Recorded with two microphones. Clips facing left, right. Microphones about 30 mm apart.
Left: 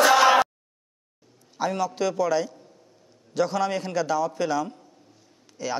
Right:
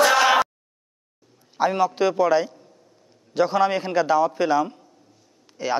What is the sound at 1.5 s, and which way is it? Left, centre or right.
Speech, right.